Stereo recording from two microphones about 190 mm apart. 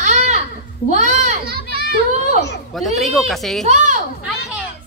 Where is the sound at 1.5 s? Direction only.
55° right (ahead or behind).